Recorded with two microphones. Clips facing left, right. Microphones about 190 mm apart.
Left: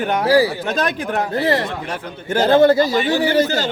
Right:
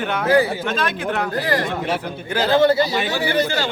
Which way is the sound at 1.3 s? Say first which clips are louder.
Left 6 dB; 25° left (ahead or behind).